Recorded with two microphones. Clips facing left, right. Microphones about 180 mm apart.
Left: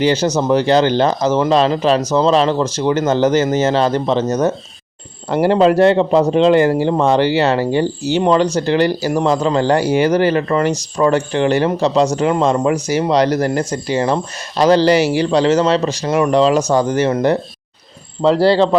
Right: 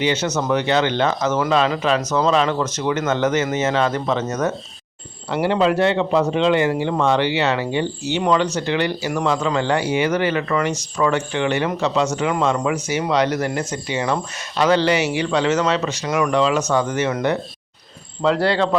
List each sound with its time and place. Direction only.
0.0 s speech: 35° left (ahead or behind)